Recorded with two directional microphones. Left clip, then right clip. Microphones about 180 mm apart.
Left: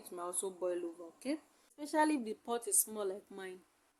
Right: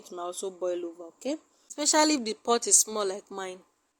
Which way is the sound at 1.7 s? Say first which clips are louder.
Right 9 dB; 40° right (ahead or behind).